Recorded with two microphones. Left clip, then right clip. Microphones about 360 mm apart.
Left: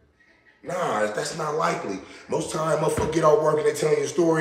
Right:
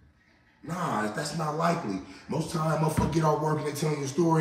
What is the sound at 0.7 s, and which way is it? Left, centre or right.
A man's voice, centre.